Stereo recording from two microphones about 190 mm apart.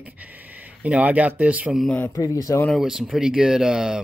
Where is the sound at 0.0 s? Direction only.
10° right (ahead or behind).